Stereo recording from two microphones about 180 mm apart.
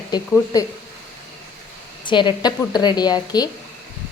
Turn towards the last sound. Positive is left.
turn(degrees=20)  # may be behind; listen again after turning